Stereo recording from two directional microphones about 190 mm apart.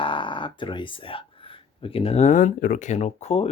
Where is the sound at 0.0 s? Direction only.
25° left (ahead or behind).